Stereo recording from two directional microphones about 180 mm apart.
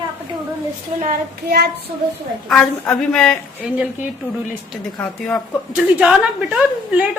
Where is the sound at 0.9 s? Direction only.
50° right (ahead or behind).